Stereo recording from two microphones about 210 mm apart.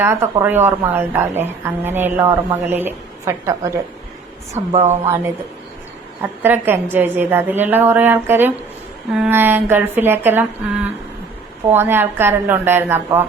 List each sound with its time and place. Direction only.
0.0 s a woman's voice: 10° right (ahead or behind)
4.5 s a woman's voice: 30° right (ahead or behind)
5.0 s a woman's voice: 10° right (ahead or behind)
11.7 s a woman's voice: 10° right (ahead or behind)